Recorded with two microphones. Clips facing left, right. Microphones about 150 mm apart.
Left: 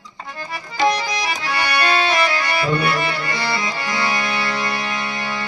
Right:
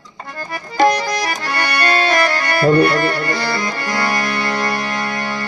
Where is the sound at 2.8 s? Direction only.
5° left (ahead or behind).